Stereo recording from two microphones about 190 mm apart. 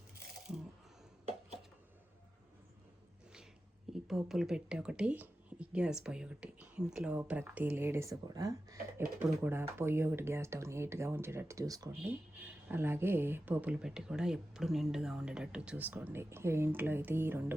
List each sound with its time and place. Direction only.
4.1 s speech: centre (ahead or behind)